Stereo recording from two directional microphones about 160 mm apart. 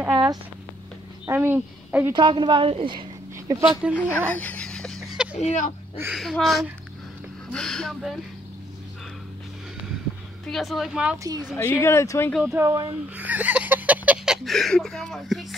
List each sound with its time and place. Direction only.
0.1 s a sound: 30° right (ahead or behind)
1.2 s a woman's voice: 15° right (ahead or behind)
2.1 s a woman's voice: 30° right (ahead or behind)
3.8 s speech: 10° right (ahead or behind)
4.3 s a sound: 10° left (ahead or behind)
5.4 s speech: 50° left (ahead or behind)
6.1 s speech: centre (ahead or behind)
10.4 s speech: centre (ahead or behind)
11.5 s speech: 15° left (ahead or behind)
12.3 s speech: centre (ahead or behind)
12.5 s speech: 20° right (ahead or behind)
13.1 s a sound: 10° right (ahead or behind)